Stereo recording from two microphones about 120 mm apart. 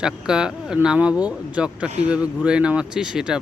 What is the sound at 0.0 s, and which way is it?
Speech, 5° right (ahead or behind).